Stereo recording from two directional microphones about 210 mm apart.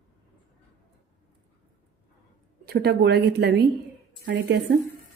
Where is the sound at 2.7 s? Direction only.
50° right (ahead or behind).